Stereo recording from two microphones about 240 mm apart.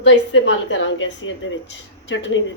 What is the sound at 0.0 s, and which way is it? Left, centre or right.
A woman's voice, left.